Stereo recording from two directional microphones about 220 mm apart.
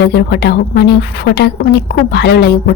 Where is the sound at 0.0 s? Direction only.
50° left (ahead or behind).